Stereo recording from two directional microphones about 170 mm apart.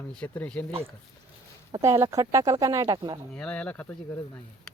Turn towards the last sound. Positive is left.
turn(degrees=10)  # may be behind; listen again after turning